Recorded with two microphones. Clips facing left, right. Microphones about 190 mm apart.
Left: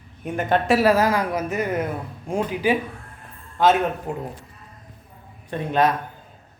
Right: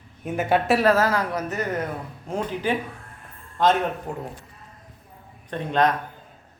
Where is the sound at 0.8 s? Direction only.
10° left (ahead or behind).